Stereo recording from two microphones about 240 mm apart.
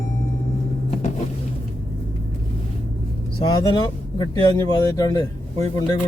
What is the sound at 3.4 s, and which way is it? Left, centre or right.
Speech, centre.